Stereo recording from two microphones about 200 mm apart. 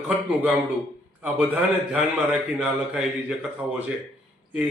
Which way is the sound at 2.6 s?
5° right (ahead or behind).